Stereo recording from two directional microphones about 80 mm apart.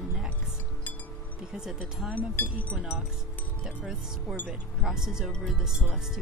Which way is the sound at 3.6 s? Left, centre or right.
Centre.